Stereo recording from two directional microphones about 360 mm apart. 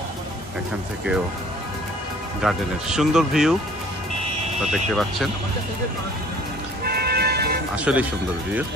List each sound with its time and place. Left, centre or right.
2.4 s speech: centre
4.7 s speech: centre
6.8 s vehicle: right
7.7 s speech: centre